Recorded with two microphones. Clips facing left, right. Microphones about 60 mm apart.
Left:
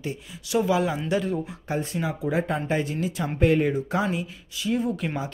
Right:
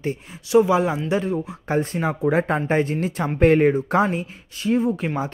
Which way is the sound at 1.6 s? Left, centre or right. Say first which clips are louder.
Right 8 dB; right.